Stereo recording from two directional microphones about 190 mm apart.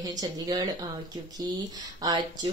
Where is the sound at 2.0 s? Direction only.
20° right (ahead or behind).